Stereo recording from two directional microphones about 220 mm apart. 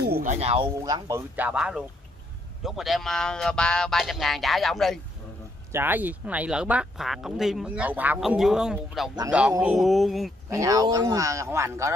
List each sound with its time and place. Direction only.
0.0 s speech: 40° right (ahead or behind)
0.7 s speech: 15° right (ahead or behind); by 5.0 s centre (ahead or behind)
5.7 s speech: 10° right (ahead or behind)
10.5 s speech: 15° right (ahead or behind)